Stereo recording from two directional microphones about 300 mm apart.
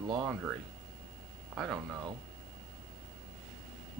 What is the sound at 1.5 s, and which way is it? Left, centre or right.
Speech, centre.